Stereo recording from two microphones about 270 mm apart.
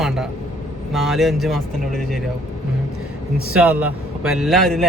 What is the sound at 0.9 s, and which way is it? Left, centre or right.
Speech, centre.